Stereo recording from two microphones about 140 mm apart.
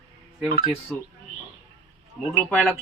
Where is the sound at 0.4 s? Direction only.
35° right (ahead or behind).